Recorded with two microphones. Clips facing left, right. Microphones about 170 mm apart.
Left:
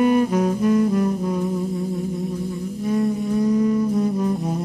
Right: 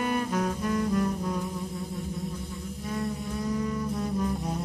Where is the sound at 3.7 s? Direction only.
20° left (ahead or behind).